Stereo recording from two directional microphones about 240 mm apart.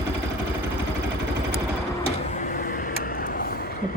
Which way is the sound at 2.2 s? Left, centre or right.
Left.